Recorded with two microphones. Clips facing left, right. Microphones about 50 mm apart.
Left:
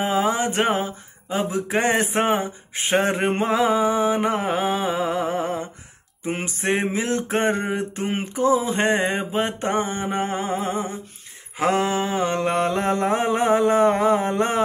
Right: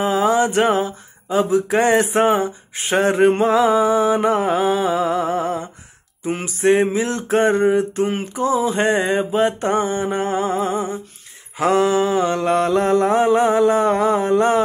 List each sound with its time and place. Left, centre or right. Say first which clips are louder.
0.0 s mantra: right 5 dB; left
4.2 s mantra: right 5 dB; centre
4.5 s mantra: right 5 dB; left
6.2 s mantra: right 7 dB; left